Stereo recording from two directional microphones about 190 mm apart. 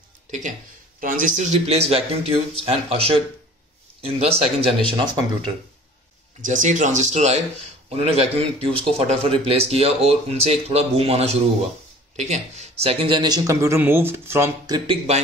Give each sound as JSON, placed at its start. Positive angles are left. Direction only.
{"t": 0.3, "sound": "speech", "side_deg": -40}
{"t": 6.4, "sound": "speech", "side_deg": -40}
{"t": 14.9, "sound": "speech", "side_deg": -35}